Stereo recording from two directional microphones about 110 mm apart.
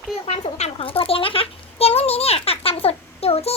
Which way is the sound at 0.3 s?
75° left (ahead or behind).